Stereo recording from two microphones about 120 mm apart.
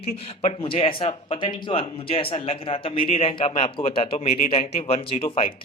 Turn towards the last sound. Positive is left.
turn(degrees=45)  # may be behind; listen again after turning